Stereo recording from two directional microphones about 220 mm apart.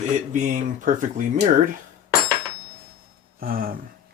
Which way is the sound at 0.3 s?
35° right (ahead or behind).